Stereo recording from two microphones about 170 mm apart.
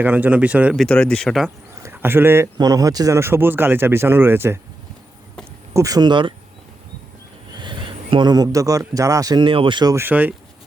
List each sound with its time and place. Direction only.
0.0 s speech: 10° right (ahead or behind)
1.8 s speech: 10° right (ahead or behind)
5.7 s speech: 20° right (ahead or behind)
7.5 s speech: 30° right (ahead or behind); by 10.3 s 10° right (ahead or behind)